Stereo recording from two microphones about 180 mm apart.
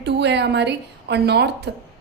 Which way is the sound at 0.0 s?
70° right (ahead or behind).